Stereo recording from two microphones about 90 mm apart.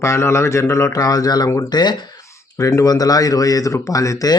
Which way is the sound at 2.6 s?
35° left (ahead or behind).